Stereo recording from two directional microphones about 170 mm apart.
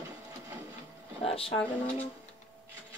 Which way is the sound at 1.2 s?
35° left (ahead or behind).